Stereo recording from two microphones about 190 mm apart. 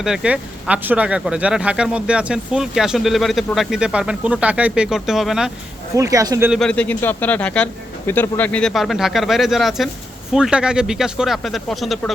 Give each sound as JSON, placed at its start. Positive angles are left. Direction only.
{"t": 0.0, "sound": "speech", "side_deg": -5}
{"t": 5.9, "sound": "speech", "side_deg": -15}
{"t": 6.5, "sound": "speech", "side_deg": 5}